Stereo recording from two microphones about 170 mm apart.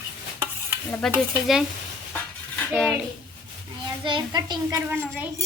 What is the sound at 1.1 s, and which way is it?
Speech, 5° right (ahead or behind).